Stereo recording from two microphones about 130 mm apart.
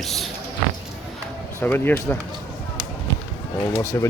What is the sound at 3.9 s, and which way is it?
Speech, 20° left (ahead or behind).